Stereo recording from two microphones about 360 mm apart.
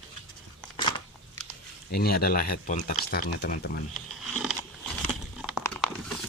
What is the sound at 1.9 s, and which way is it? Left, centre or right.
Speech, left.